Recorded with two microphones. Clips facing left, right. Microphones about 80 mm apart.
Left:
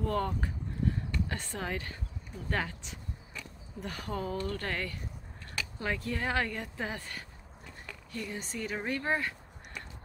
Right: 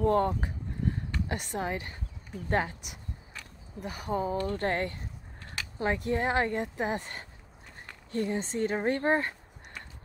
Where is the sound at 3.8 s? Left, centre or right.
Centre.